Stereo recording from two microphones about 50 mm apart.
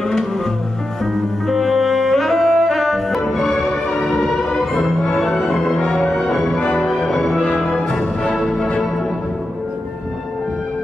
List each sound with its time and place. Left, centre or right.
1.1 s music: centre
5.8 s music: left
6.0 s music: centre